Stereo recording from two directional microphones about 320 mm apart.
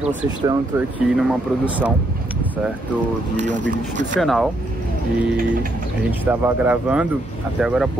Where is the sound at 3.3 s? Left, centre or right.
Right.